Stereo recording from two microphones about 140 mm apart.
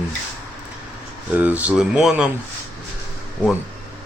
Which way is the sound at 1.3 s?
10° right (ahead or behind).